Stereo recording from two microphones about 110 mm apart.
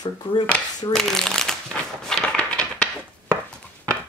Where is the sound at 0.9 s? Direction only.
5° left (ahead or behind).